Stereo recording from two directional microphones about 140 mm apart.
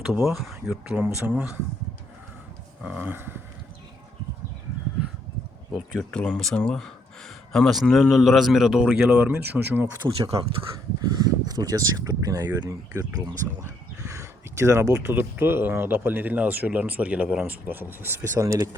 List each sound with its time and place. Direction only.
0.1 s a man's voice: 5° right (ahead or behind)
2.8 s speech: 10° right (ahead or behind)
5.7 s a man's voice: centre (ahead or behind)
11.2 s speech: 30° right (ahead or behind)
14.1 s speech: 20° right (ahead or behind)